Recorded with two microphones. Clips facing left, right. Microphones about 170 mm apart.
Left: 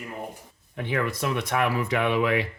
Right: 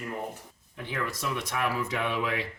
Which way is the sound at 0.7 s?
65° left (ahead or behind).